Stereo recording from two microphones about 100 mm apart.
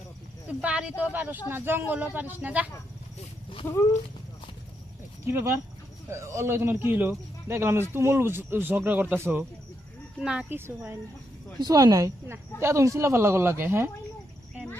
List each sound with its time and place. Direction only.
0.6 s speech: 10° right (ahead or behind)
5.2 s speech: 25° right (ahead or behind)
10.2 s speech: 10° right (ahead or behind)
10.5 s speech: 20° right (ahead or behind)
11.6 s speech: 40° right (ahead or behind); by 13.9 s 25° right (ahead or behind)